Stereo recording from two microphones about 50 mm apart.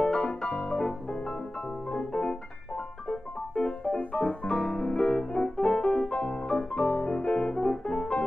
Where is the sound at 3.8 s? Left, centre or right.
Left.